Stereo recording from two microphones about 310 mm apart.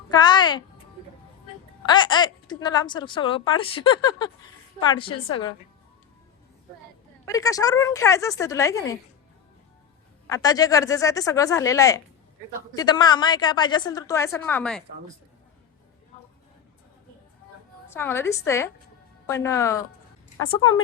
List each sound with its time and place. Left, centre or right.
0.1 s a woman's voice: centre
1.9 s speech: centre
7.3 s speech: centre
10.2 s speech: centre
17.8 s speech: centre